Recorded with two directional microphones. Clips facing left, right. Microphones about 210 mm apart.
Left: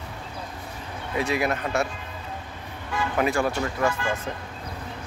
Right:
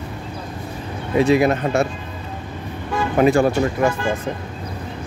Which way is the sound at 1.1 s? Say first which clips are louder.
Right 10 dB; 25° right (ahead or behind).